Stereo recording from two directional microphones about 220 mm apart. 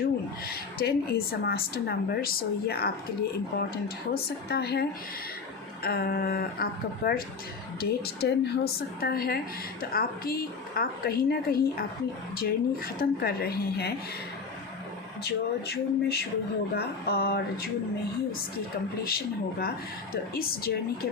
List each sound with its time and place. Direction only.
0.4 s a woman's voice: 45° left (ahead or behind)
15.2 s a woman's voice: 45° left (ahead or behind)
19.0 s a woman's voice: 45° left (ahead or behind)